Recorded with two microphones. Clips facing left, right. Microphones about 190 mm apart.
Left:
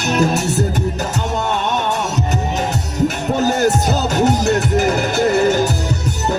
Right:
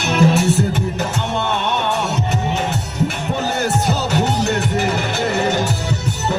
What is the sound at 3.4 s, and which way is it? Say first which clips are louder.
Music: left 3 dB; 40° left (ahead or behind).